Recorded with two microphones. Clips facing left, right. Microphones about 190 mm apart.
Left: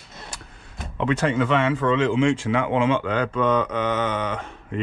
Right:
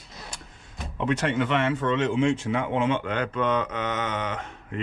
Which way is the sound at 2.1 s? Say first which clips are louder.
Left 3 dB; 90° left.